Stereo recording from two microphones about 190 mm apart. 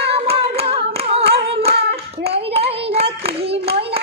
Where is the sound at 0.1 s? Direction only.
30° right (ahead or behind).